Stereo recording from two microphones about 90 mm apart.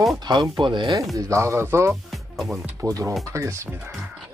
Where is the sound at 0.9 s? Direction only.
35° right (ahead or behind).